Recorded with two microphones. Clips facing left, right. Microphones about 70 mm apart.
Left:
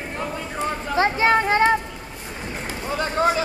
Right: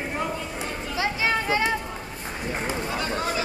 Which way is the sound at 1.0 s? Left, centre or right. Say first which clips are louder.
Left 7 dB; left.